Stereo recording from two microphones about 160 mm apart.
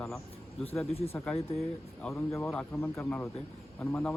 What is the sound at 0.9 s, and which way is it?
Speech, 40° left (ahead or behind).